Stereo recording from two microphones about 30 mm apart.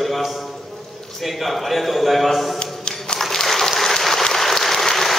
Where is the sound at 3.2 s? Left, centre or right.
Centre.